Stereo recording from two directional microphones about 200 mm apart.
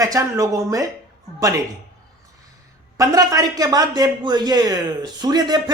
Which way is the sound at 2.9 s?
15° right (ahead or behind).